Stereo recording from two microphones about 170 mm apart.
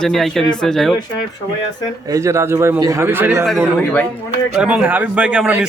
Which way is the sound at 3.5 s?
Centre (ahead or behind).